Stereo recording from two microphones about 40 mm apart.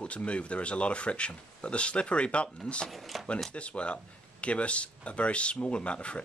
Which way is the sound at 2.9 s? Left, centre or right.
Centre.